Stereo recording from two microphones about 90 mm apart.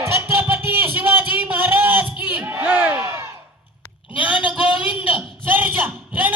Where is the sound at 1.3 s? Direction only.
20° right (ahead or behind).